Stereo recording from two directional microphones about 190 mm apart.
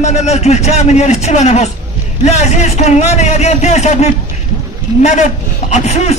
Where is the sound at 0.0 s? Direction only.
35° left (ahead or behind).